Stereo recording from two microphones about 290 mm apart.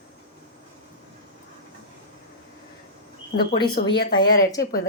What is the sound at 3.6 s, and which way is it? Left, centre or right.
Speech, left.